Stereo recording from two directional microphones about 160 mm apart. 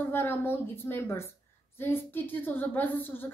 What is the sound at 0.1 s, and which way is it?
A woman's voice, 15° left (ahead or behind).